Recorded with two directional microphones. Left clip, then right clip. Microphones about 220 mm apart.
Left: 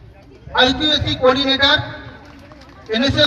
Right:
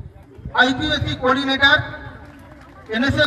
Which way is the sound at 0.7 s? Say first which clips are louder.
Left 4 dB; 45° left (ahead or behind).